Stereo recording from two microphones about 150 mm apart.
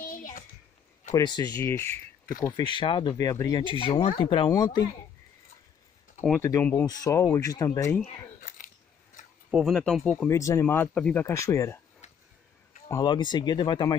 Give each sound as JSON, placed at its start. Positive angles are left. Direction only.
{"t": 0.0, "sound": "a sound", "side_deg": 65}
{"t": 1.1, "sound": "speech", "side_deg": 25}
{"t": 1.6, "sound": "speech", "side_deg": 15}
{"t": 2.4, "sound": "speech", "side_deg": 30}
{"t": 3.8, "sound": "speech", "side_deg": 40}
{"t": 4.5, "sound": "speech", "side_deg": 25}
{"t": 6.3, "sound": "speech", "side_deg": 15}
{"t": 8.4, "sound": "a sound", "side_deg": 65}
{"t": 9.5, "sound": "speech", "side_deg": 0}
{"t": 10.2, "sound": "speech", "side_deg": 20}
{"t": 11.2, "sound": "speech", "side_deg": 20}
{"t": 12.0, "sound": "a sound", "side_deg": 50}
{"t": 12.8, "sound": "speech", "side_deg": 20}
{"t": 13.1, "sound": "speech", "side_deg": 30}